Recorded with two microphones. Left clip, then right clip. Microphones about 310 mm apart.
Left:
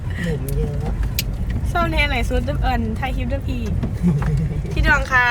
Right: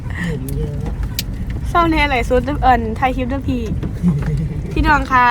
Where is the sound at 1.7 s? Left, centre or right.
Right.